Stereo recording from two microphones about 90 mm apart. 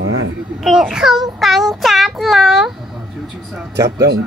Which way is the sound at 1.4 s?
Centre (ahead or behind).